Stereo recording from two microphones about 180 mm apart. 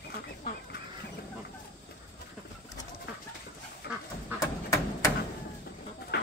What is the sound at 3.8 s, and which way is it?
Duck, 60° left (ahead or behind).